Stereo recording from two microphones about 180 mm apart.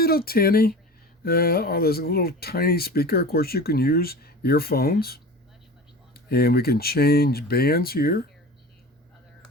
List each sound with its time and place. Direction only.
0.0 s speech: 55° left (ahead or behind)